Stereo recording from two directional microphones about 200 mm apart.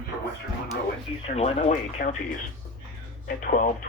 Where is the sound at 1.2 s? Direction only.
30° left (ahead or behind).